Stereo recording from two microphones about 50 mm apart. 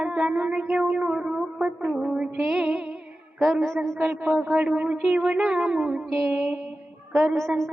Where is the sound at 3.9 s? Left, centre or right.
Right.